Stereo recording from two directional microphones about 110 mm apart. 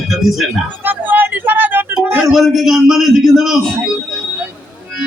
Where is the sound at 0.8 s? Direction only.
15° right (ahead or behind).